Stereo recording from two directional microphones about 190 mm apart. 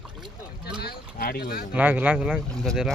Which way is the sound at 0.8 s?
55° left (ahead or behind).